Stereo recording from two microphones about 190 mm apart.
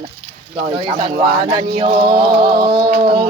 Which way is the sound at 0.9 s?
25° right (ahead or behind).